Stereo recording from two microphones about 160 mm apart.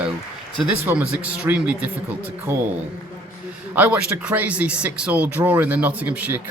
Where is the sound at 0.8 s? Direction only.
10° right (ahead or behind).